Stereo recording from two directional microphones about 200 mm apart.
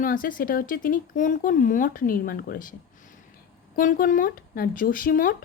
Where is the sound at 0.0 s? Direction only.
45° left (ahead or behind).